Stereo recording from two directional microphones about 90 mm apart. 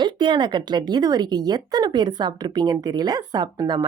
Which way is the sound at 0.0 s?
60° right (ahead or behind).